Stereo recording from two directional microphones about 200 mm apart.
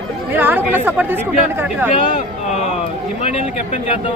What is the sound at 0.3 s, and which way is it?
Speech, 10° right (ahead or behind).